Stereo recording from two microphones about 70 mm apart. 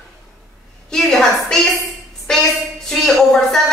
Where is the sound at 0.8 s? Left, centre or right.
Centre.